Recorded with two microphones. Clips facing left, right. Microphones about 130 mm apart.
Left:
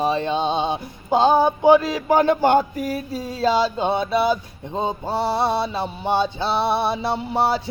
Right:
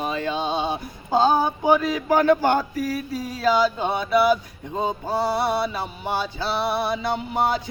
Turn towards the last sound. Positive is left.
turn(degrees=30)  # may be behind; listen again after turning